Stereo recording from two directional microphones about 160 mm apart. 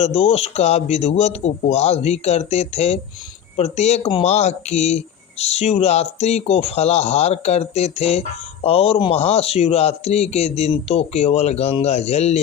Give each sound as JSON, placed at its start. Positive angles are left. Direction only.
{"t": 0.0, "sound": "a man's voice", "side_deg": 40}